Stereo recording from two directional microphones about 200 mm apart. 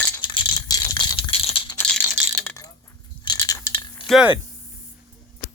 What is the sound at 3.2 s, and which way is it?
Rattle, 20° left (ahead or behind).